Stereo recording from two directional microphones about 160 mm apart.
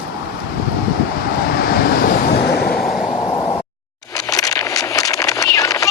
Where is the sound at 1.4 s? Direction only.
75° left (ahead or behind).